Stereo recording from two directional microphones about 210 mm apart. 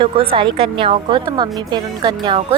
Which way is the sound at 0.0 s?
25° right (ahead or behind).